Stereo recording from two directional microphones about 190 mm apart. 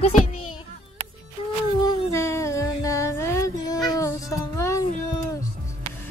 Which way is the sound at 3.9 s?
15° left (ahead or behind).